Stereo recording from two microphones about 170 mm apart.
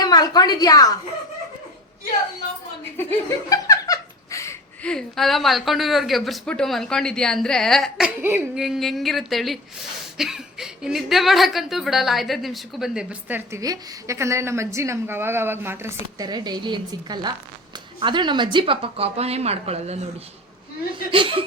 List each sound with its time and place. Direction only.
0.0 s a woman's voice: 25° left (ahead or behind)
3.0 s laughter: 15° left (ahead or behind)
4.8 s a woman's voice: 5° left (ahead or behind); by 20.0 s 40° right (ahead or behind)
21.1 s speech: 30° right (ahead or behind)